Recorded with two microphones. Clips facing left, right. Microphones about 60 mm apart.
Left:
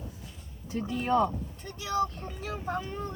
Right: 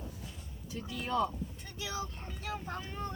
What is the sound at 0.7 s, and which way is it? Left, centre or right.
Speech, left.